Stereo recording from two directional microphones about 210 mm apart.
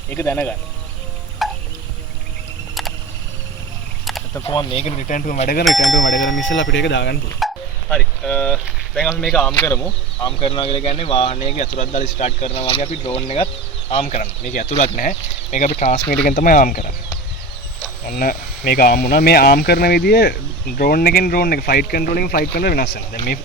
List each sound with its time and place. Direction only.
0.1 s speech: 10° left (ahead or behind)
1.4 s a sound: centre (ahead or behind)
4.4 s speech: 25° left (ahead or behind); by 5.6 s 40° left (ahead or behind)
5.6 s speech: centre (ahead or behind)
6.0 s speech: 60° left (ahead or behind)
7.3 s a sound: centre (ahead or behind)
9.0 s speech: 5° left (ahead or behind); by 16.8 s 40° left (ahead or behind)
18.0 s speech: 45° left (ahead or behind)